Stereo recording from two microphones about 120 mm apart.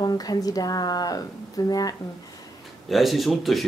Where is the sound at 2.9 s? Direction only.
Centre (ahead or behind).